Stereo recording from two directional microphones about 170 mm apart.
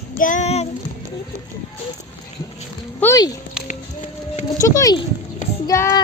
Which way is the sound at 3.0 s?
20° left (ahead or behind).